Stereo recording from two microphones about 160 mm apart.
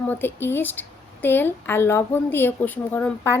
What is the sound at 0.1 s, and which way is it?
A woman's voice, 15° left (ahead or behind).